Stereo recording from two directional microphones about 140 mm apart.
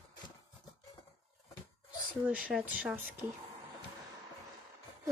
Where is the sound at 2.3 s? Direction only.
10° right (ahead or behind).